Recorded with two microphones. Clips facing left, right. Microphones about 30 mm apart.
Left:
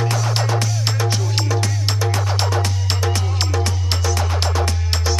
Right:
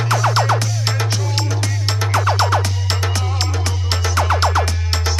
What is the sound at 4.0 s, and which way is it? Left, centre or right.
Music, centre.